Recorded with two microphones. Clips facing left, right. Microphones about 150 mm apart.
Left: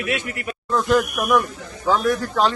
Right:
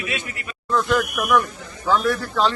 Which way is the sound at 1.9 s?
10° left (ahead or behind).